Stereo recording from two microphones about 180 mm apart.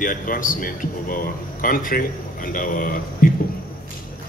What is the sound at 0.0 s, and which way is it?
Speech, 50° left (ahead or behind).